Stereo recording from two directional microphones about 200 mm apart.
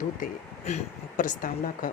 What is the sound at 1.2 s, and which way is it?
Speech, 40° left (ahead or behind).